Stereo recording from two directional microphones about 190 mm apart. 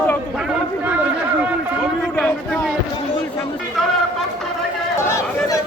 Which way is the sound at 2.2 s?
Centre (ahead or behind).